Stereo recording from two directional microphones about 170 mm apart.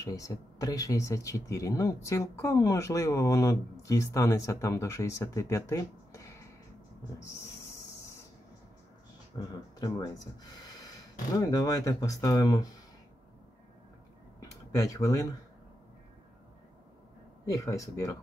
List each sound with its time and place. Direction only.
0.0 s speech: 20° left (ahead or behind)
9.3 s speech: 25° left (ahead or behind)
14.4 s a sound: 20° left (ahead or behind)
17.5 s speech: 20° left (ahead or behind)